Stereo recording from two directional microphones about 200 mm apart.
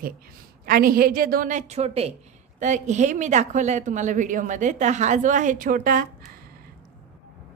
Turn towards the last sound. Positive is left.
turn(degrees=-45)  # may be behind; listen again after turning